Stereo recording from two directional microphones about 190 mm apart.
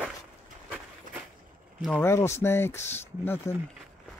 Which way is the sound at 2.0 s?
15° left (ahead or behind).